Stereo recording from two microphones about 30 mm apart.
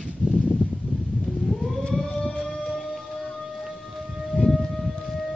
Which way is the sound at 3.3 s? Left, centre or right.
Centre.